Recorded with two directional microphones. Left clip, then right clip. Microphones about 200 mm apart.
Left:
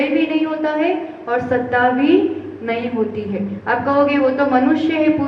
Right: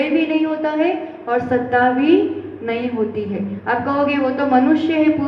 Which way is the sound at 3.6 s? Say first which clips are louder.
Left 3 dB; 55° right (ahead or behind).